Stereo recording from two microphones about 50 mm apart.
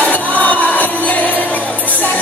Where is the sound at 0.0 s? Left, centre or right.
Left.